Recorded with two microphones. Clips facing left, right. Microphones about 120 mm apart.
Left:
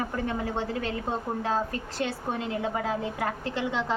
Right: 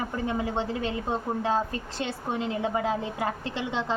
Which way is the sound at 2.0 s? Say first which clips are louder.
Even; 20° right (ahead or behind).